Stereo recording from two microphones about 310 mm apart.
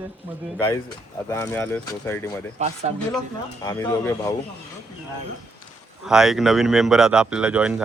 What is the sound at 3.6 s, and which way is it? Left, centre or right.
Speech, centre.